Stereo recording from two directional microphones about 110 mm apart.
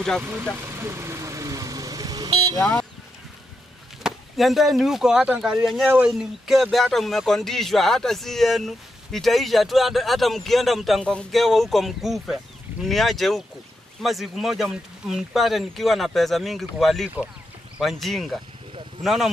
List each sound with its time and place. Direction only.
0.6 s vehicle: 25° right (ahead or behind); by 2.6 s 40° right (ahead or behind)
2.6 s speech: 10° left (ahead or behind)
4.0 s speech: centre (ahead or behind)